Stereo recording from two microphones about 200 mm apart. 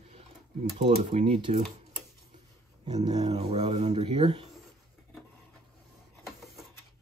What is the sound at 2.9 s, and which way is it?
Speech, 20° right (ahead or behind).